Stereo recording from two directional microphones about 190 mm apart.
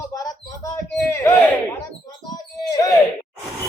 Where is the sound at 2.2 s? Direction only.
20° left (ahead or behind).